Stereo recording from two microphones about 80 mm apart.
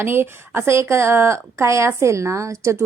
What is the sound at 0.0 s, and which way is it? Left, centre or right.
Speech, right.